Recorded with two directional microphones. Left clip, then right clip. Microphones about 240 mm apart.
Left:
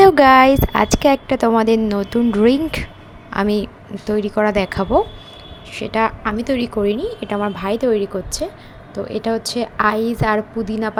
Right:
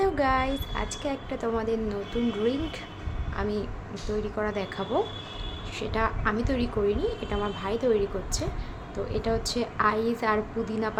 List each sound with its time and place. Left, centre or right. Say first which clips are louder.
0.0 s a woman's voice: left 16 dB; left